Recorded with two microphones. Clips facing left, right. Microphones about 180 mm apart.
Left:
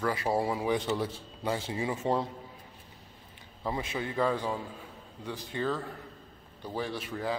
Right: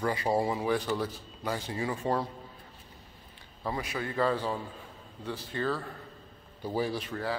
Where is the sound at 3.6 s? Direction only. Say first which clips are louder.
Even; 20° left (ahead or behind).